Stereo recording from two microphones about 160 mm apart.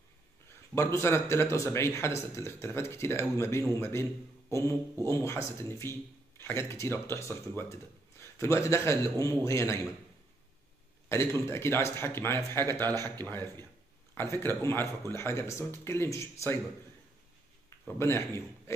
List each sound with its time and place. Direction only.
0.7 s a man's voice: 15° left (ahead or behind)
11.1 s speech: 15° left (ahead or behind)
12.8 s a man's voice: 25° right (ahead or behind)
13.2 s speech: 15° left (ahead or behind)
17.6 s speech: 15° left (ahead or behind)